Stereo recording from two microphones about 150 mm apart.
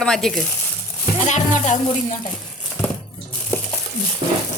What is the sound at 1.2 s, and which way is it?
Speech, 55° left (ahead or behind).